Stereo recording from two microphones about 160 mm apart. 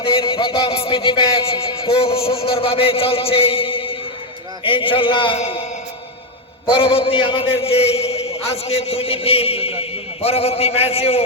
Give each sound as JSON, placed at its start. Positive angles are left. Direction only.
{"t": 0.0, "sound": "a man's voice", "side_deg": 35}
{"t": 6.7, "sound": "a man's voice", "side_deg": 35}